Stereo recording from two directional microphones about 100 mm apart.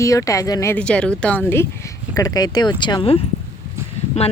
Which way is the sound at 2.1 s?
35° left (ahead or behind).